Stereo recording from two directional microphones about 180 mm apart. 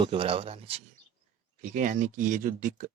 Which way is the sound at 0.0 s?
30° right (ahead or behind).